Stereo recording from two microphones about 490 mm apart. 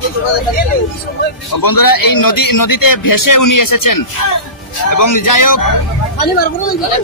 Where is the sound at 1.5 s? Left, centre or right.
Left.